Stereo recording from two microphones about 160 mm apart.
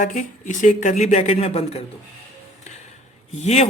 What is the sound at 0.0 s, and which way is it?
Speech, 55° left (ahead or behind).